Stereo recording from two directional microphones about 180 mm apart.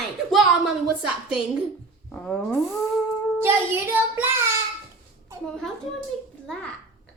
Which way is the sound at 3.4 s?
10° right (ahead or behind).